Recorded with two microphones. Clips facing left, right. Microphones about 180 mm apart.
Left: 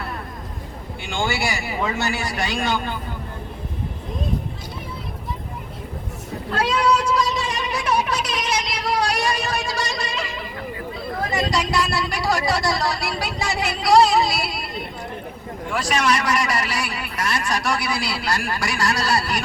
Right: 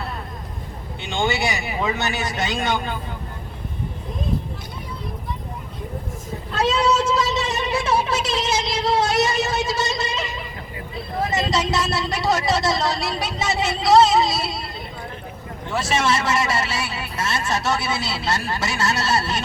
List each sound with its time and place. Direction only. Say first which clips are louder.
1.0 s a man's voice: right 2 dB; 20° right (ahead or behind)
6.5 s cat: even; 25° right (ahead or behind)
11.2 s a sound: right 1 dB; 25° right (ahead or behind)
15.7 s a man's voice: even; 25° right (ahead or behind)